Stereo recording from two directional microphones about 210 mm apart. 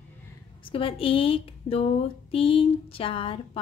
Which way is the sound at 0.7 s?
25° left (ahead or behind).